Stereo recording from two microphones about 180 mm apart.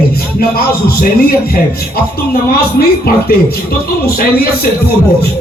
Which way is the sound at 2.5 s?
60° left (ahead or behind).